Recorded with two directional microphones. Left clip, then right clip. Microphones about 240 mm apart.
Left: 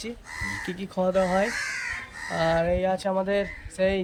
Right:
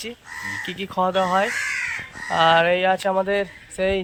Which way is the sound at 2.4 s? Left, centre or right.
Centre.